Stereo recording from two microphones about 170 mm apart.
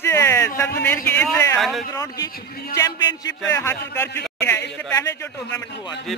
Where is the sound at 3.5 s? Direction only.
15° left (ahead or behind).